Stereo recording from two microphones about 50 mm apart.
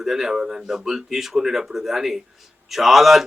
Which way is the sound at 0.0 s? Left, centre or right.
Centre.